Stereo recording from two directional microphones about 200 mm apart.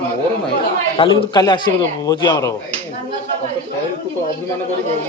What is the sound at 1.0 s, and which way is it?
A man's voice, 20° left (ahead or behind).